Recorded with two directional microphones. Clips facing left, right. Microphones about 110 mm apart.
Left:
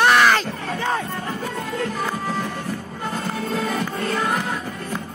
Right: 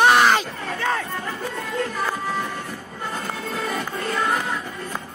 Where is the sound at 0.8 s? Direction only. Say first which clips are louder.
Even; 20° left (ahead or behind).